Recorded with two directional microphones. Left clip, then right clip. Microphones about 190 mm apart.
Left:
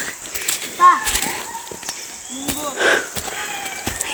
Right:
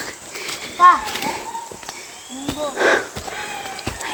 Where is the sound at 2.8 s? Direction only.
15° right (ahead or behind).